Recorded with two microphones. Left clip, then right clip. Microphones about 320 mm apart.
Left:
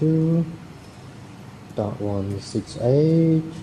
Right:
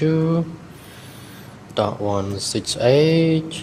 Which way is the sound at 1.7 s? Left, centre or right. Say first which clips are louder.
Right 6 dB; right.